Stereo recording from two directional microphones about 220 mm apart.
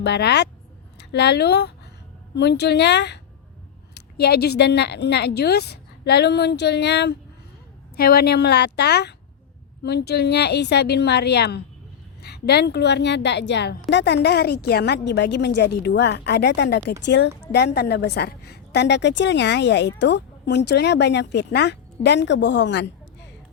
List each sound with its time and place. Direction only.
0.0 s a woman's voice: 50° left (ahead or behind)